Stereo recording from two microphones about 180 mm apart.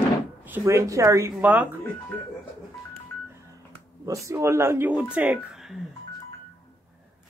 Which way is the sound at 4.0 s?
15° right (ahead or behind).